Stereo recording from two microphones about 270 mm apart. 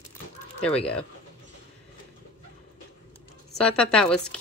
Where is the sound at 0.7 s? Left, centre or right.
Centre.